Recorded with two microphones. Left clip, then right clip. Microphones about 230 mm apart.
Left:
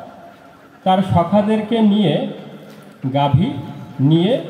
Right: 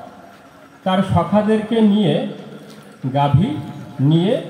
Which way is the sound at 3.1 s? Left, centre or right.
Left.